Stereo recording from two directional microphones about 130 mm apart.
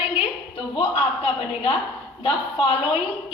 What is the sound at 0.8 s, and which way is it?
A man's voice, 45° left (ahead or behind).